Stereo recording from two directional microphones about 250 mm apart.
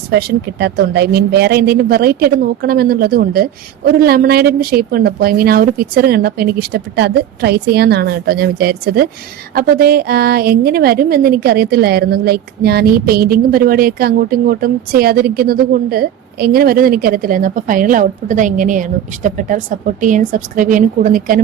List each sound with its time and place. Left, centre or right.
0.1 s a woman's voice: right